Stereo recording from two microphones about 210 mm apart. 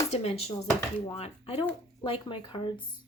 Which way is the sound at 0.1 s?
30° left (ahead or behind).